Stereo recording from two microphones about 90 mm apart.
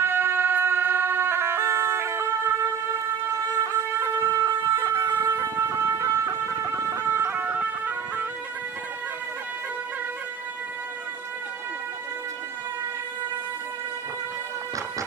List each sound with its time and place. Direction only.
0.0 s emergency vehicle: 25° right (ahead or behind)
3.6 s shofar: 35° right (ahead or behind)
5.2 s a sound: 35° right (ahead or behind); by 7.9 s 20° right (ahead or behind)